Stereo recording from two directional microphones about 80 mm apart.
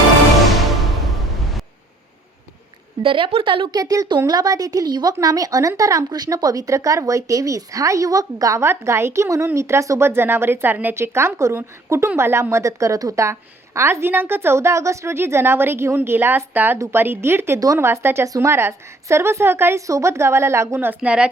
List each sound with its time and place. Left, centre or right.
3.0 s a woman's voice: right
3.8 s speech: right
8.6 s a woman's voice: right
16.7 s a woman's voice: right
17.0 s a woman's voice: right
21.0 s a woman's voice: centre